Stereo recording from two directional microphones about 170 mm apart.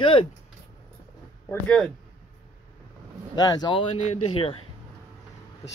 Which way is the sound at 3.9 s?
35° left (ahead or behind).